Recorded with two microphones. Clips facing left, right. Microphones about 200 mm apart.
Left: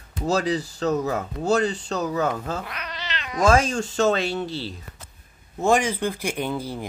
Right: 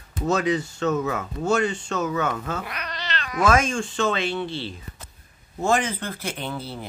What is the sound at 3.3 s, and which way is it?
Speech, 30° left (ahead or behind).